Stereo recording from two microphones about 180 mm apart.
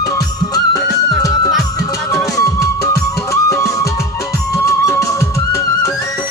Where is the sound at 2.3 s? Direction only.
20° left (ahead or behind).